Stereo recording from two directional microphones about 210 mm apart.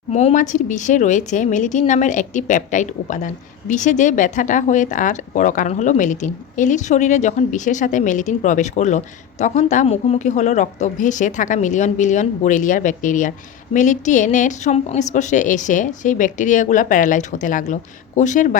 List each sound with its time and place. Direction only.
0.1 s a woman's voice: 30° left (ahead or behind)